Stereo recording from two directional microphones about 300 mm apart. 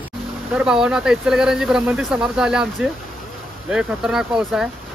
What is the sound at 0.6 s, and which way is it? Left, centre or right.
Speech, centre.